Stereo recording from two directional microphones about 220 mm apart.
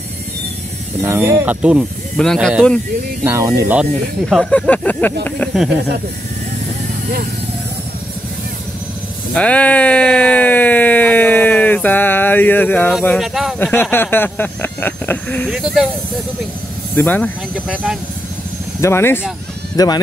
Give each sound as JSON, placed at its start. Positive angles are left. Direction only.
{"t": 1.0, "sound": "speech", "side_deg": -10}
{"t": 3.3, "sound": "speech", "side_deg": -15}
{"t": 4.3, "sound": "speech", "side_deg": 5}
{"t": 9.3, "sound": "speech", "side_deg": 5}
{"t": 16.9, "sound": "speech", "side_deg": 10}
{"t": 18.8, "sound": "speech", "side_deg": 10}